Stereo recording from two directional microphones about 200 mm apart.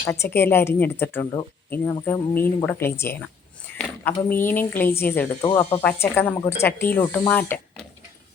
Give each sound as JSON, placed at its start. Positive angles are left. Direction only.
{"t": 0.0, "sound": "speech", "side_deg": 10}
{"t": 5.5, "sound": "speech", "side_deg": 25}
{"t": 5.8, "sound": "speech", "side_deg": 10}